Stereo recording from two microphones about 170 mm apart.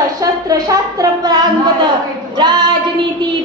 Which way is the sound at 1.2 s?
25° right (ahead or behind).